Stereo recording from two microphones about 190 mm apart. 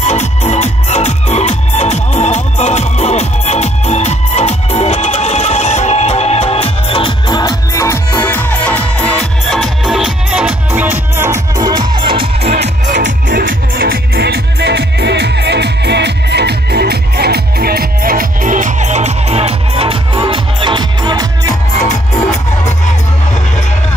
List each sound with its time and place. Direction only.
0.0 s music: 35° left (ahead or behind); by 12.5 s 25° right (ahead or behind)
12.6 s music: 40° right (ahead or behind); by 21.3 s 25° right (ahead or behind)